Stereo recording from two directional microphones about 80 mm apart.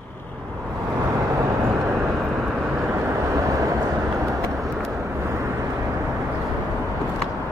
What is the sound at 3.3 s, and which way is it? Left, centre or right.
Vehicle, right.